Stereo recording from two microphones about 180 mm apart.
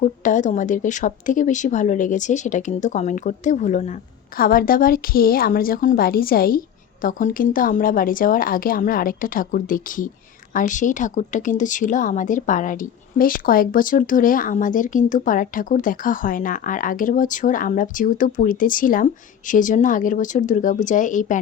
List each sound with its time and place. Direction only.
0.0 s a woman's voice: 45° left (ahead or behind)
4.4 s a woman's voice: 55° left (ahead or behind)